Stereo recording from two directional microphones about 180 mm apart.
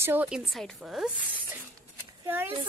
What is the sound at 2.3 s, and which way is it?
Speech, 10° right (ahead or behind).